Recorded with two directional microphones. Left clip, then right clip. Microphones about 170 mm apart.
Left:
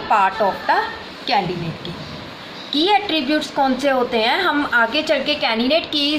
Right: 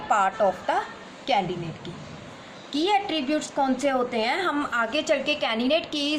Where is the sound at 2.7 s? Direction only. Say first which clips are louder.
Left 7 dB; 65° right (ahead or behind).